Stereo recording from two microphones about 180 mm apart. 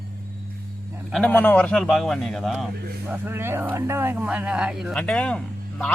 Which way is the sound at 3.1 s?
10° right (ahead or behind).